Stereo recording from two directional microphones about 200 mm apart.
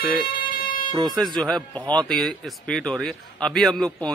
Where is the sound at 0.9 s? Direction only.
20° right (ahead or behind).